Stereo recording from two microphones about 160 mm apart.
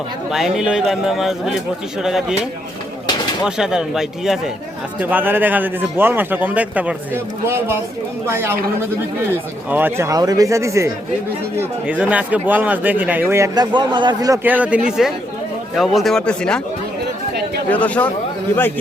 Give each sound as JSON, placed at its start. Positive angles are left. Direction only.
{"t": 0.3, "sound": "a man's voice", "side_deg": 0}
{"t": 9.6, "sound": "speech", "side_deg": -10}
{"t": 14.4, "sound": "a man's voice", "side_deg": -10}
{"t": 17.7, "sound": "speech", "side_deg": 10}